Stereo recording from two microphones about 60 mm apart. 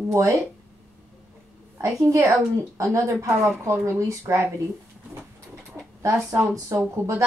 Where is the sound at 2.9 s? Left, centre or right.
Right.